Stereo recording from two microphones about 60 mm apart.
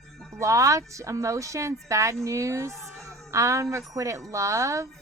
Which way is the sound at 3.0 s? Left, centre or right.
Right.